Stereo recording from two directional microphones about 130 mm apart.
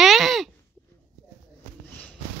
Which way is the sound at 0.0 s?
Centre (ahead or behind).